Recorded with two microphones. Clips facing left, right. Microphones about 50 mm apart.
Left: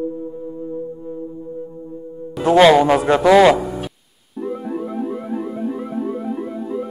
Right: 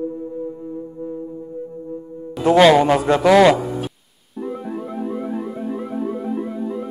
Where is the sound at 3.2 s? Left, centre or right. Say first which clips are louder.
Left 1 dB; centre.